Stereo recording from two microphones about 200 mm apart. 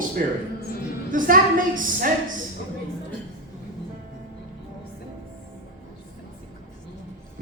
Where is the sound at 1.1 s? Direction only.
40° right (ahead or behind).